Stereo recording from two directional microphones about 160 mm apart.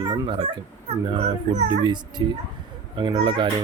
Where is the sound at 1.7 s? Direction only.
25° right (ahead or behind).